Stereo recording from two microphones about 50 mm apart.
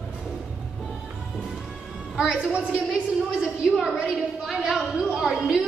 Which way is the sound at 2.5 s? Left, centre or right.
Right.